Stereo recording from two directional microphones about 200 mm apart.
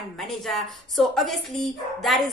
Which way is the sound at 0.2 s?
Centre (ahead or behind).